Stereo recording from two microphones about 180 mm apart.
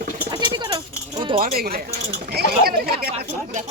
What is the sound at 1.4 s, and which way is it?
Speech, 55° right (ahead or behind).